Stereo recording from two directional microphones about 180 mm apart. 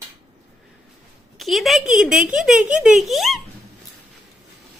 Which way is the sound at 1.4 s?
Centre (ahead or behind).